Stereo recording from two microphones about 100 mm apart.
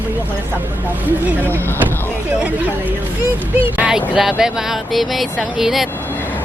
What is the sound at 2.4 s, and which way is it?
Speech, 15° right (ahead or behind).